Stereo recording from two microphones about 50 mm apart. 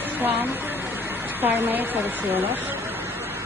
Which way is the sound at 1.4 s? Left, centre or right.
Right.